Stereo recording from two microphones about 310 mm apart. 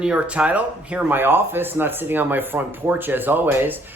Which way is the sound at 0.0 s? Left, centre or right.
Centre.